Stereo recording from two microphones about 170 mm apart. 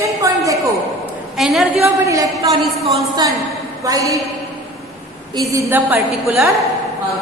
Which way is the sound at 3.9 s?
20° right (ahead or behind).